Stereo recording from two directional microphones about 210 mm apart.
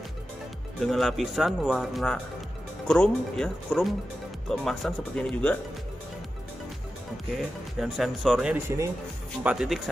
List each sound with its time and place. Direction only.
0.7 s speech: centre (ahead or behind)
7.3 s speech: centre (ahead or behind)